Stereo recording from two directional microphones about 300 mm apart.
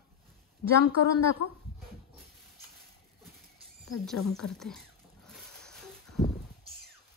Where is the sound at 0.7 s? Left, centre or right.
Right.